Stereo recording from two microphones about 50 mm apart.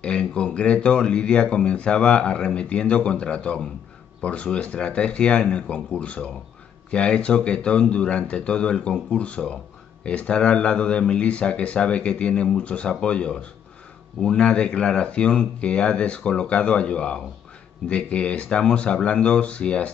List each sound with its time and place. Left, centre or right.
0.0 s speech: left